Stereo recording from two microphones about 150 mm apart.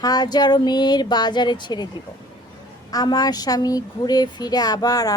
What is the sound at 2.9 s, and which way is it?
Speech, 25° left (ahead or behind).